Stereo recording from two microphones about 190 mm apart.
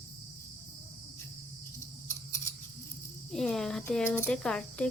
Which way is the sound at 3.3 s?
Centre (ahead or behind).